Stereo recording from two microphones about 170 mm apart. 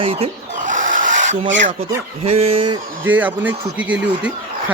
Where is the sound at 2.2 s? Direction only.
35° right (ahead or behind).